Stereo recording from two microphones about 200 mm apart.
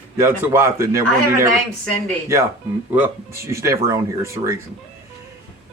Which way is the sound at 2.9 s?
10° right (ahead or behind).